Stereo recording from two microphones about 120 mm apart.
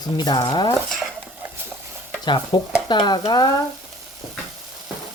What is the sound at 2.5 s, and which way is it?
Speech, 35° left (ahead or behind).